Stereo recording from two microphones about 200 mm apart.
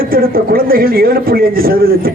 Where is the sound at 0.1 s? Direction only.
45° right (ahead or behind).